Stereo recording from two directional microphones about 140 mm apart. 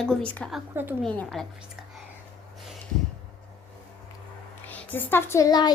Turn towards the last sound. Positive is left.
turn(degrees=30)  # may be behind; listen again after turning